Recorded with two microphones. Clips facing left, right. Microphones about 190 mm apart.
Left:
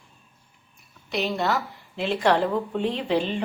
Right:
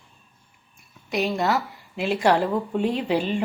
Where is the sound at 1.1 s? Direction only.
10° right (ahead or behind).